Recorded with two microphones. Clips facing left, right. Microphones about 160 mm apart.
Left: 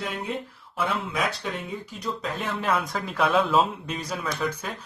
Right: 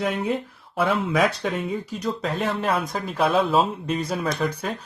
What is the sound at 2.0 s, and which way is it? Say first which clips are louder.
A man's voice: right 3 dB; 40° right (ahead or behind).